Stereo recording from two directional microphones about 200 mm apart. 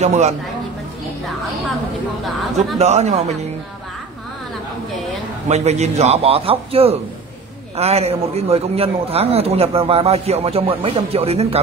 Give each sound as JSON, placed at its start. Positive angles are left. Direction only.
{"t": 0.0, "sound": "a man's voice", "side_deg": -35}
{"t": 2.2, "sound": "speech", "side_deg": 0}
{"t": 2.8, "sound": "a man's voice", "side_deg": -35}
{"t": 5.5, "sound": "a man's voice", "side_deg": -35}